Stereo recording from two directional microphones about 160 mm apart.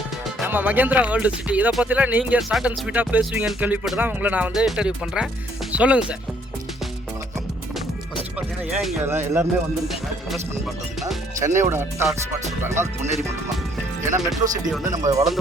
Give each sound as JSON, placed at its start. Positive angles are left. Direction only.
{"t": 0.4, "sound": "speech", "side_deg": -10}
{"t": 8.4, "sound": "speech", "side_deg": -5}
{"t": 9.0, "sound": "speech", "side_deg": -15}
{"t": 9.9, "sound": "speech", "side_deg": 0}
{"t": 11.3, "sound": "speech", "side_deg": -15}
{"t": 14.8, "sound": "speech", "side_deg": -20}